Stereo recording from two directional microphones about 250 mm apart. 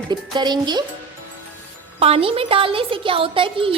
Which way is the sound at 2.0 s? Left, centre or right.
Right.